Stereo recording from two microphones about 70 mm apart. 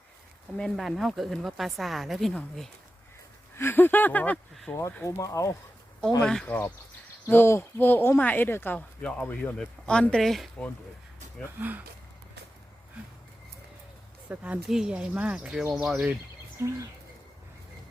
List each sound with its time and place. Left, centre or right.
0.5 s a woman's voice: centre
3.5 s speech: left
5.0 s speech: left
6.2 s speech: centre
7.3 s speech: left
9.0 s speech: centre
11.4 s speech: right
14.3 s speech: centre
14.7 s speech: centre
14.9 s speech: centre
15.7 s a woman's voice: centre
16.6 s speech: right